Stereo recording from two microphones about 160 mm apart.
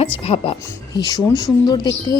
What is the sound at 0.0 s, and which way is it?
Speech, 35° left (ahead or behind).